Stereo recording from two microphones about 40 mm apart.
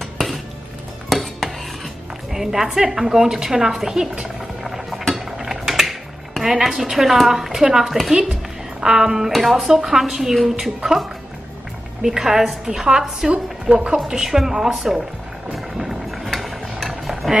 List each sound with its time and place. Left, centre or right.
0.0 s music: centre
1.0 s dishes: centre
2.3 s a woman's voice: centre
4.6 s stir: centre
5.1 s mechanisms: centre
6.4 s a woman's voice: centre
12.0 s a woman's voice: centre
15.5 s music: centre
16.3 s a sound: centre